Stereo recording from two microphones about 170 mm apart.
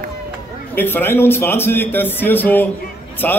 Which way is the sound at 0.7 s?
10° left (ahead or behind).